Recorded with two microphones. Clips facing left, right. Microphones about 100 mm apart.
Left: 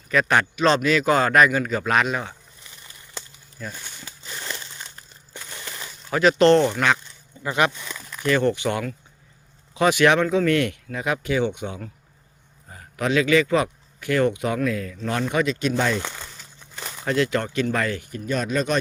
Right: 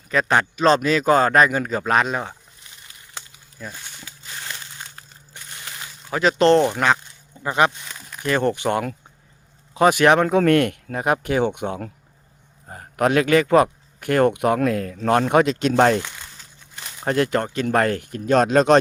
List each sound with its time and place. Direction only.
0.1 s a man's voice: 30° right (ahead or behind)
3.6 s speech: 10° right (ahead or behind)
6.1 s a man's voice: 20° right (ahead or behind)
8.3 s speech: 35° right (ahead or behind); by 11.9 s 55° right (ahead or behind)
12.6 s a man's voice: 45° right (ahead or behind); by 16.0 s 65° right (ahead or behind)
17.1 s speech: 45° right (ahead or behind); by 18.8 s 85° right